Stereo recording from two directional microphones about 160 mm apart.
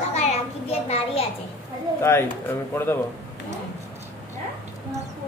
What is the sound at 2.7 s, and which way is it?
Speech, 15° left (ahead or behind).